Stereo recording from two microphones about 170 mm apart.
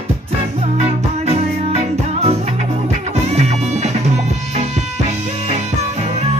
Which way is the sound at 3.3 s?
40° right (ahead or behind).